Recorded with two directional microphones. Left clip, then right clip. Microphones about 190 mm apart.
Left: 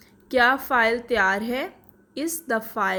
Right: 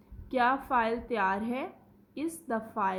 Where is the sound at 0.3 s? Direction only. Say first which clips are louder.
Left 8 dB; 25° left (ahead or behind).